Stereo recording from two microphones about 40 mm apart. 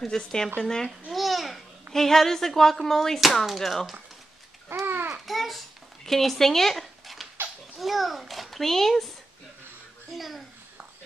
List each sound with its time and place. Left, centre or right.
0.0 s speech: centre
1.1 s a child's voice: centre
4.8 s babbling: right
5.2 s babbling: centre
7.7 s a child's voice: centre
10.1 s speech: centre